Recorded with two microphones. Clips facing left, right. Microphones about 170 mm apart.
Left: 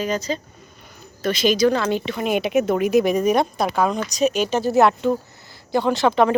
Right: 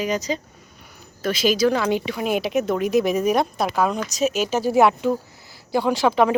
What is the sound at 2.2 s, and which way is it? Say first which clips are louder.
A woman's voice: left 3 dB; centre (ahead or behind).